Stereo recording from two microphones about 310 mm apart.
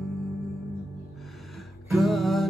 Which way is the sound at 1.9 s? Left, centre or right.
Centre.